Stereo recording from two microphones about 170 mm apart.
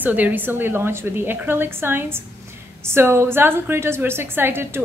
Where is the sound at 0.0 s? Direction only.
10° right (ahead or behind).